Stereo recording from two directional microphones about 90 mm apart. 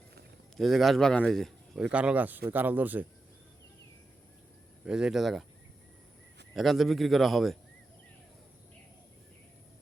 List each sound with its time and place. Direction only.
0.5 s a man's voice: centre (ahead or behind)
1.9 s speech: 15° right (ahead or behind)
4.9 s a man's voice: 10° right (ahead or behind)
6.5 s a man's voice: centre (ahead or behind)